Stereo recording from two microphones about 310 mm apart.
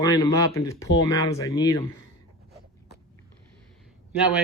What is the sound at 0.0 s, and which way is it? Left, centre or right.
Speech, centre.